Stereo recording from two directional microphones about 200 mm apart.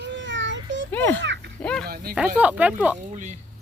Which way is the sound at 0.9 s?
10° left (ahead or behind).